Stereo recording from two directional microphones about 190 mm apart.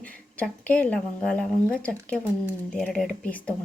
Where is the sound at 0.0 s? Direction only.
5° left (ahead or behind).